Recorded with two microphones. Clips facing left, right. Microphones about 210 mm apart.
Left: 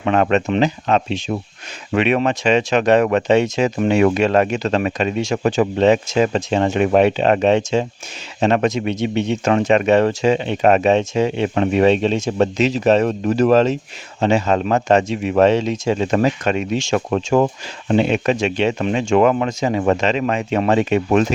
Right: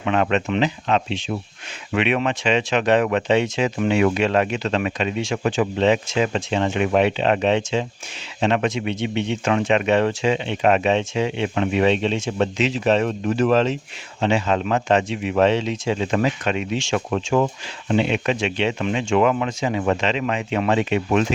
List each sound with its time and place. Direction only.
0.0 s speech: 45° left (ahead or behind)